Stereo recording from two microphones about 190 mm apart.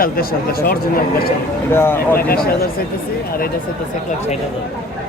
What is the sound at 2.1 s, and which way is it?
Speech, 50° left (ahead or behind).